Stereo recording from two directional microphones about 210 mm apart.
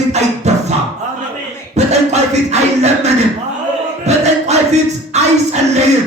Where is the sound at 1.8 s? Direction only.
30° right (ahead or behind).